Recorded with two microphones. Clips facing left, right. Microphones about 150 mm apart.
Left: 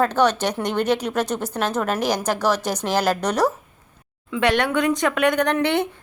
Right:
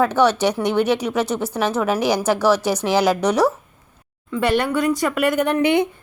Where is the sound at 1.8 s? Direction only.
10° right (ahead or behind).